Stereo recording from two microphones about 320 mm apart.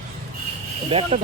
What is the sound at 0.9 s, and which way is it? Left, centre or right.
Speech, centre.